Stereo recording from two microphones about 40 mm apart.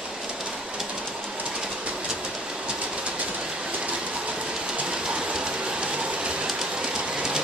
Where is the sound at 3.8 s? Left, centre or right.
Right.